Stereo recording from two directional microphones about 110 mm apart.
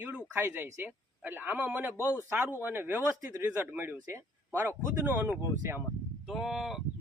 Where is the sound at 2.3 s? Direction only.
15° right (ahead or behind).